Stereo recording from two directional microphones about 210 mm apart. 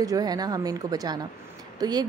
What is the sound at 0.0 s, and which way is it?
Speech, 15° right (ahead or behind).